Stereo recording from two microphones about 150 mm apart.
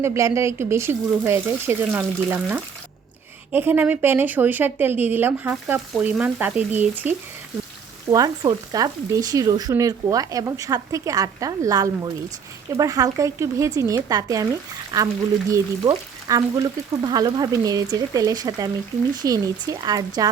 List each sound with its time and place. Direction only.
0.0 s speech: 20° right (ahead or behind)
8.1 s speech: 25° right (ahead or behind)